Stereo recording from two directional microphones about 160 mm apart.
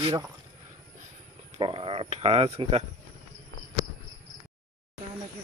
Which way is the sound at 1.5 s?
35° right (ahead or behind).